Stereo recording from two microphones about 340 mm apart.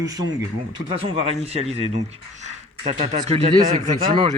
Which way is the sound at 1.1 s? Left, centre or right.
Centre.